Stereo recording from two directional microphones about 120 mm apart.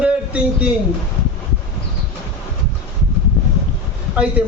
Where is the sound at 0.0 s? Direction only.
10° right (ahead or behind).